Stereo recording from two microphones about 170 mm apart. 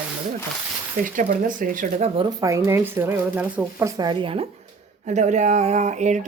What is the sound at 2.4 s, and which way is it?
Speech, 15° right (ahead or behind).